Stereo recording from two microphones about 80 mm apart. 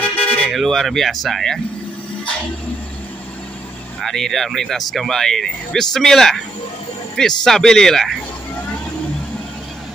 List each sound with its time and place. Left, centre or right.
0.0 s toot: centre
0.5 s speech: centre
4.0 s speech: centre